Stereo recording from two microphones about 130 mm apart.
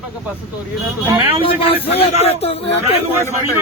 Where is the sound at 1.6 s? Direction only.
50° left (ahead or behind).